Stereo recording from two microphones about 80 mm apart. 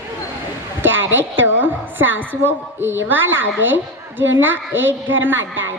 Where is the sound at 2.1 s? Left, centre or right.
Right.